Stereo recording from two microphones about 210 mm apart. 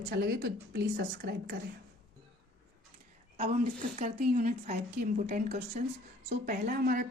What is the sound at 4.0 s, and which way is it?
A woman's voice, 35° right (ahead or behind).